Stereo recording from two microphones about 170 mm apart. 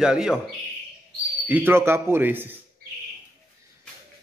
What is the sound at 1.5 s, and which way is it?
A man's voice, 10° right (ahead or behind).